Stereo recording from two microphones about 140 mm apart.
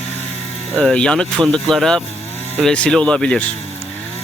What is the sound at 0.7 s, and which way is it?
Speech, 5° left (ahead or behind).